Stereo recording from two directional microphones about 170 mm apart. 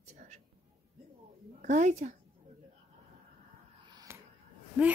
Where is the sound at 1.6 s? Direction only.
45° right (ahead or behind).